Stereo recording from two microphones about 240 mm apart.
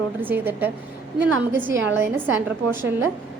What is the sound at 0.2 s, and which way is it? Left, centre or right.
Speech, centre.